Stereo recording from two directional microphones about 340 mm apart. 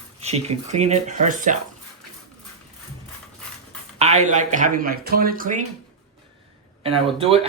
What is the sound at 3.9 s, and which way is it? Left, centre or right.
Speech, centre.